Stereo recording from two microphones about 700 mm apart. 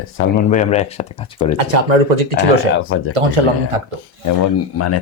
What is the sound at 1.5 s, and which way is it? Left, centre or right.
Speech, right.